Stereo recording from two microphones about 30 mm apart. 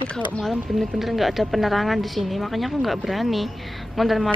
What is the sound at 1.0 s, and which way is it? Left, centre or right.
Speech, centre.